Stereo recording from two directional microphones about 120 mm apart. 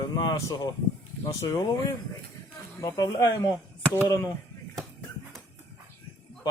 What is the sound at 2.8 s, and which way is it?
Speech, 35° left (ahead or behind).